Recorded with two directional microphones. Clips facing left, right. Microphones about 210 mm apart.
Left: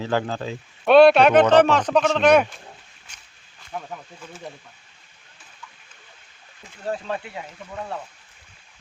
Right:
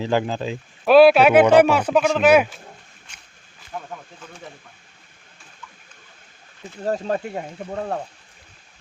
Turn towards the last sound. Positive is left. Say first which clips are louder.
# right 6 dB
turn(degrees=-45)  # may be behind; listen again after turning